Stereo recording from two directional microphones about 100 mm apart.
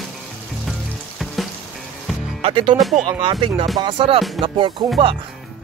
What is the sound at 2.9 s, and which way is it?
Speech, 90° right.